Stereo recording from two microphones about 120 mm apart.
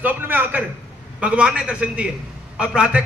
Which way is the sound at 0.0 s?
15° right (ahead or behind).